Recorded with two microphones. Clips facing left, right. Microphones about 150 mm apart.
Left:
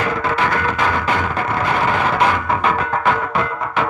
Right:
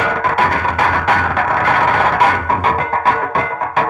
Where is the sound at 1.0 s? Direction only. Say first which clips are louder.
Right 4 dB; 70° right (ahead or behind).